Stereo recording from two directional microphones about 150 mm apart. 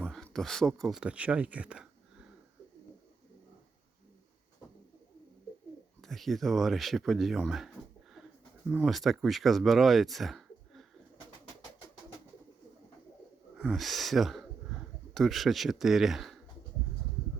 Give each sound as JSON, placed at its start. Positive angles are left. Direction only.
{"t": 0.0, "sound": "speech", "side_deg": 5}
{"t": 6.0, "sound": "speech", "side_deg": 0}
{"t": 8.8, "sound": "speech", "side_deg": 0}
{"t": 13.6, "sound": "speech", "side_deg": 0}